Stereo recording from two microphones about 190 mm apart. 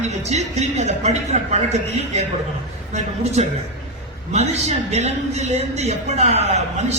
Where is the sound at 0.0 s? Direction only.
35° right (ahead or behind).